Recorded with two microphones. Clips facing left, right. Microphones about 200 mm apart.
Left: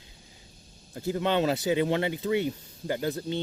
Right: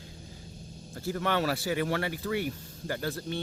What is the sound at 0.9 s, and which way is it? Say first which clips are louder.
Speech: left 3 dB; 20° left (ahead or behind).